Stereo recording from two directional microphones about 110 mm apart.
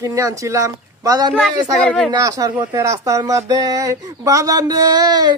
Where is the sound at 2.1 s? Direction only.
30° right (ahead or behind).